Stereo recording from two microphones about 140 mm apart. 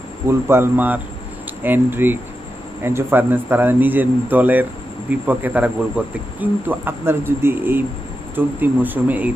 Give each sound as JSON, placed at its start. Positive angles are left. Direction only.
{"t": 0.3, "sound": "speech", "side_deg": -15}